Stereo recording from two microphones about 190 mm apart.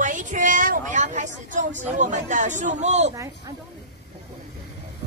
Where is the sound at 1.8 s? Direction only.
40° right (ahead or behind).